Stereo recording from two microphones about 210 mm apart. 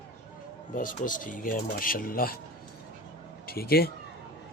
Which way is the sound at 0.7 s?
40° left (ahead or behind).